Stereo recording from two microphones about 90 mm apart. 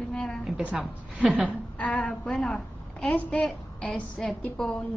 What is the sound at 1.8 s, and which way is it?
A woman's voice, 15° left (ahead or behind).